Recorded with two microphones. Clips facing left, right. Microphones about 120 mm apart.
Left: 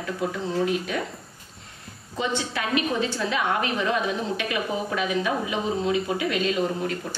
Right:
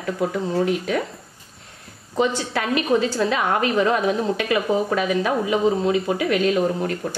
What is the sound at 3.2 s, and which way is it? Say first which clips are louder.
A woman's voice: right 4 dB; 40° right (ahead or behind).